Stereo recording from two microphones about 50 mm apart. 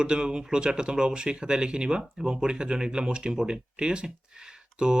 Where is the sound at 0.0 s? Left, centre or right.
Centre.